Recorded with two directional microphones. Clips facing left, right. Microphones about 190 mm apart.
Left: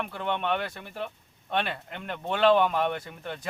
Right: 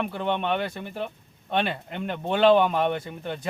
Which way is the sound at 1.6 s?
25° right (ahead or behind).